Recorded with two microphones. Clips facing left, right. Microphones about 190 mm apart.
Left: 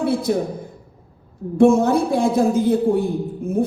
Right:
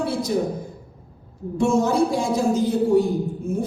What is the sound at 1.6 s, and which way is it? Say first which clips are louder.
A woman's voice: left 5 dB; 55° left (ahead or behind).